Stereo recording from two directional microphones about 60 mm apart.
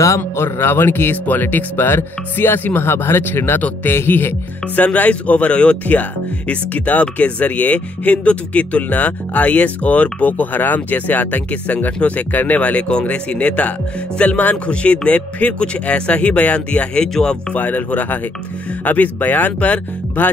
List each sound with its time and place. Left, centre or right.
0.4 s speech: left
4.7 s speech: left
17.6 s speech: left